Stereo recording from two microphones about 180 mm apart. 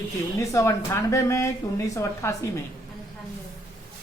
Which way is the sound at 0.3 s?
15° left (ahead or behind).